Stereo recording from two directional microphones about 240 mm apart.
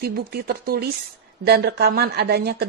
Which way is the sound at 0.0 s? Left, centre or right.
Right.